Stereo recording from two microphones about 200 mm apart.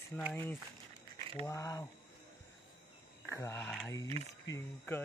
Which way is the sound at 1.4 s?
15° left (ahead or behind).